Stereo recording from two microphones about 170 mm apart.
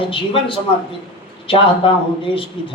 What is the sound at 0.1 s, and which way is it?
A man's voice, 30° left (ahead or behind).